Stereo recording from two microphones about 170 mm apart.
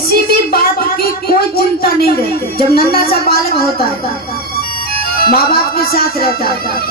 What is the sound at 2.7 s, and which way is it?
Speech, 60° left (ahead or behind).